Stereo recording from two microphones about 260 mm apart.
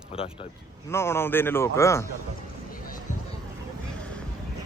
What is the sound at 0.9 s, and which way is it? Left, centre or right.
Speech, centre.